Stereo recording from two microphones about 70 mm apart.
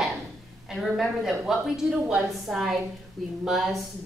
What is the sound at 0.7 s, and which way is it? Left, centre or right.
A woman's voice, centre.